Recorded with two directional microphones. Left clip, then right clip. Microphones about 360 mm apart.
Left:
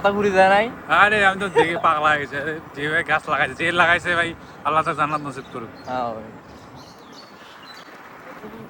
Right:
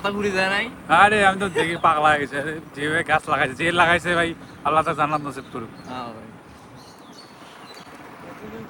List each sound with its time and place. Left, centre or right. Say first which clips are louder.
0.0 s speech: left 6 dB; centre
0.9 s speech: right 2 dB; centre
5.9 s speech: left 9 dB; centre